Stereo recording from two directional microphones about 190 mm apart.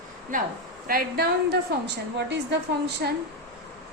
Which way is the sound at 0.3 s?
45° right (ahead or behind).